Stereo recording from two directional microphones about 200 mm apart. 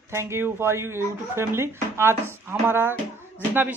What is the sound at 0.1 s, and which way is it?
Speech, 15° right (ahead or behind).